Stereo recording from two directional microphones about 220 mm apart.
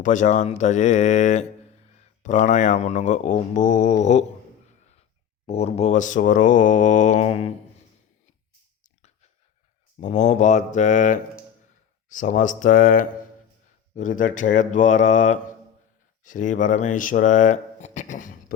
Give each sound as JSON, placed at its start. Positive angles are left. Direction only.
{"t": 0.0, "sound": "mantra", "side_deg": 35}
{"t": 5.5, "sound": "mantra", "side_deg": 30}
{"t": 10.0, "sound": "mantra", "side_deg": 30}
{"t": 16.2, "sound": "speech", "side_deg": 35}